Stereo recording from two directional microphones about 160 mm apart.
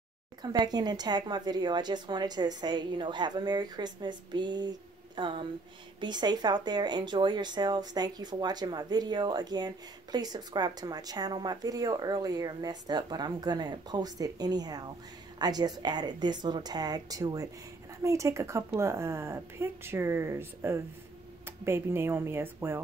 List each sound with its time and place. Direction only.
0.4 s a woman's voice: 25° right (ahead or behind)